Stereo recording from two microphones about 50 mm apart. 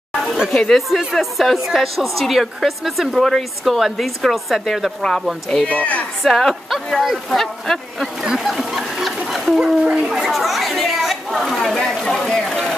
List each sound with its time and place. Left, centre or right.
0.7 s speech: centre
5.7 s speech: left
6.2 s speech: centre
8.2 s a sound: centre
9.6 s a child's voice: centre
10.1 s speech: centre